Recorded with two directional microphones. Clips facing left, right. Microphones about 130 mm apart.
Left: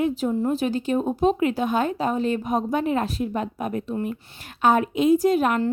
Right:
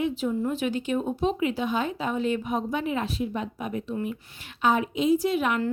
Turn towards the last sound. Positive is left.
turn(degrees=40)  # may be behind; listen again after turning